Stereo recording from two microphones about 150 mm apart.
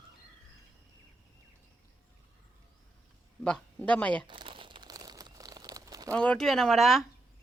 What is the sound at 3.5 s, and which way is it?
Speech, 5° left (ahead or behind).